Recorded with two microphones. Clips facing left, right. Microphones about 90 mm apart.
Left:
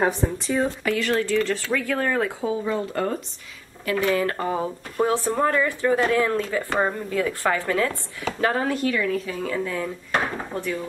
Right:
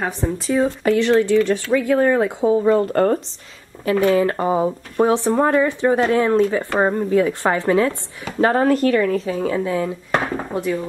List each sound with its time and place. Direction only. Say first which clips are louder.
0.0 s speech: even; centre (ahead or behind)
0.9 s speech: right 8 dB; 25° right (ahead or behind)
2.5 s speech: right 9 dB; 45° right (ahead or behind)
4.1 s speech: right 6 dB; 25° right (ahead or behind)
8.4 s speech: right 8 dB; 40° right (ahead or behind)
9.1 s speech: right 6 dB; 30° right (ahead or behind)